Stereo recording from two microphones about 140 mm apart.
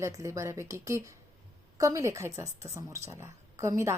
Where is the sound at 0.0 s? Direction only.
20° right (ahead or behind).